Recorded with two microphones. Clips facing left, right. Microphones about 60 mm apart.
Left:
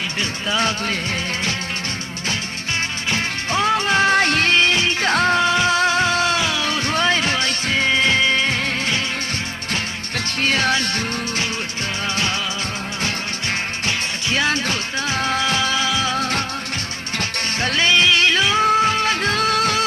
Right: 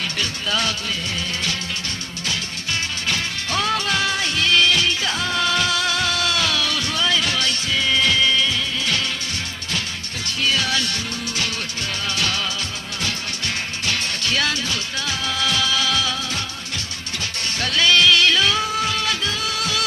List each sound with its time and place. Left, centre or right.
0.2 s music: left
3.1 s music: left
4.5 s music: left
4.9 s music: left
5.4 s music: left
10.2 s music: left
13.8 s music: left
16.1 s music: left
17.6 s music: left
18.6 s music: left